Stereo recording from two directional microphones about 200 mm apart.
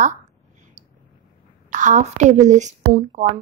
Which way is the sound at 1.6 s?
35° right (ahead or behind).